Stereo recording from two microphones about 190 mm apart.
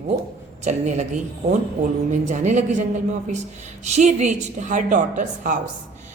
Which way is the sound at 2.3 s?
40° right (ahead or behind).